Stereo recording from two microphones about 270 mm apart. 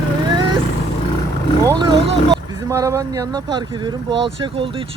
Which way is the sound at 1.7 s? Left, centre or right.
Centre.